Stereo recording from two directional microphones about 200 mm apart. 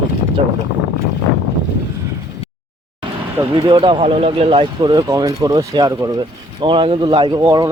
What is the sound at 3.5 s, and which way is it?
Speech, 25° right (ahead or behind).